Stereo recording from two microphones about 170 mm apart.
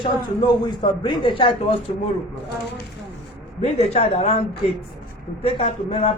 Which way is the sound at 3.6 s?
40° left (ahead or behind).